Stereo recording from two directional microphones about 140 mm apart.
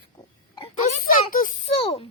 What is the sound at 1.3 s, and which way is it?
Speech, 75° left (ahead or behind).